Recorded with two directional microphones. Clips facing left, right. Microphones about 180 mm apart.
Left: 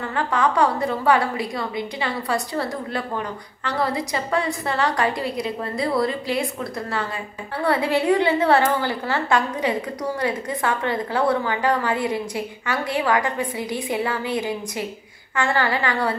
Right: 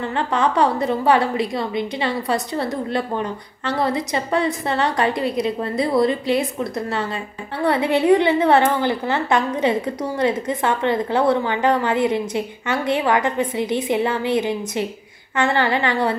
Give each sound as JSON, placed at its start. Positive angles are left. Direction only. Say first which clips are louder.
{"t": 0.3, "sound": "a woman's voice", "louder": "right 1 dB", "side_deg": -25}